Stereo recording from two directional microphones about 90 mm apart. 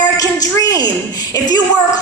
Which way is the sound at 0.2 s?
40° left (ahead or behind).